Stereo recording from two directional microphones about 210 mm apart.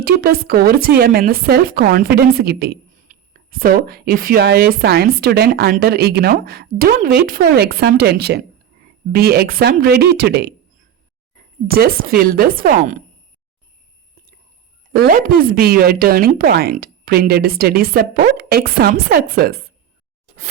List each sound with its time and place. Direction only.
0.0 s speech: 45° right (ahead or behind)
11.7 s speech: 45° right (ahead or behind)
14.9 s speech: 45° right (ahead or behind)